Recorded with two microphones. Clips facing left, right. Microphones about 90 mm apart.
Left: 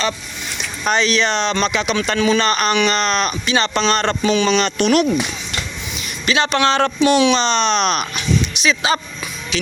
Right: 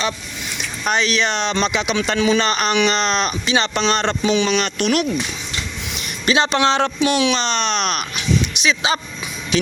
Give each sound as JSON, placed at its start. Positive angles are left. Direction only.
{"t": 0.9, "sound": "speech", "side_deg": -10}
{"t": 6.2, "sound": "speech", "side_deg": -25}
{"t": 6.7, "sound": "speech", "side_deg": -10}
{"t": 8.6, "sound": "speech", "side_deg": -15}
{"t": 9.5, "sound": "speech", "side_deg": -45}